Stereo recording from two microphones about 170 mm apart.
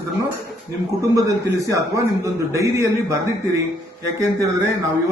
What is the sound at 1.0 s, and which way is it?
A man's voice, 20° right (ahead or behind).